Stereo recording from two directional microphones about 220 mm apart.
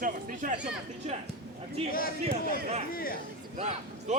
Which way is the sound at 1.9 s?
40° left (ahead or behind).